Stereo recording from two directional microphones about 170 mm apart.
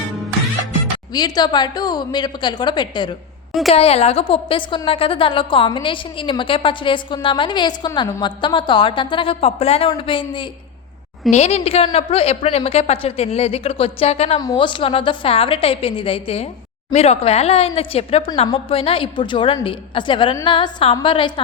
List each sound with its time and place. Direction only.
1.1 s a woman's voice: 25° left (ahead or behind)
3.7 s a woman's voice: 35° left (ahead or behind)